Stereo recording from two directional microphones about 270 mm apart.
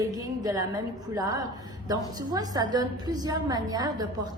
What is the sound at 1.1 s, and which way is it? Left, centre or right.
A woman's voice, centre.